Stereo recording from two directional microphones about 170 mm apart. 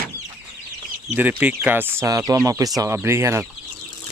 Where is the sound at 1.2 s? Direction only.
10° right (ahead or behind).